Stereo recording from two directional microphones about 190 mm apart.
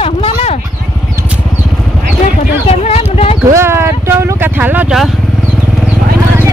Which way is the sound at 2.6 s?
30° left (ahead or behind).